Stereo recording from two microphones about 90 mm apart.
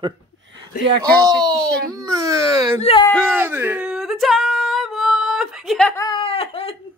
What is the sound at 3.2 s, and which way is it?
Speech, 25° right (ahead or behind).